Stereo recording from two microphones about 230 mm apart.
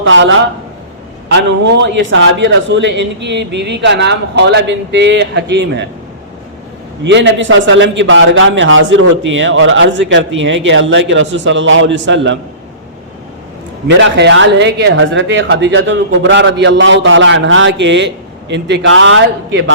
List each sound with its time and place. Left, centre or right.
0.0 s speech: right
7.0 s speech: right
13.8 s speech: right